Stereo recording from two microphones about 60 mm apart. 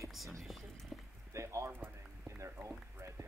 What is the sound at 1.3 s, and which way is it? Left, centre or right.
Speech, right.